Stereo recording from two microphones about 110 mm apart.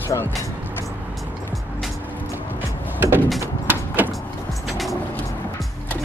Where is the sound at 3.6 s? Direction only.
15° right (ahead or behind).